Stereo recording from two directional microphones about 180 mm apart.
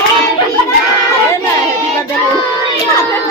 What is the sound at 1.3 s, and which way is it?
Chatter, 15° left (ahead or behind).